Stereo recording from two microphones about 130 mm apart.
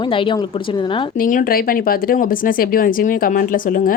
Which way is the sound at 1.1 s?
90° left.